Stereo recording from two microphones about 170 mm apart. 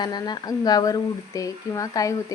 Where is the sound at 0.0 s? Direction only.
25° left (ahead or behind).